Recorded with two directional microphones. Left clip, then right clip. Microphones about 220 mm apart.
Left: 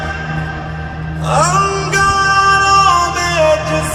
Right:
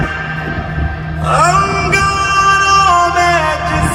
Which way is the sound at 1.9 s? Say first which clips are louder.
Left 1 dB; 50° left (ahead or behind).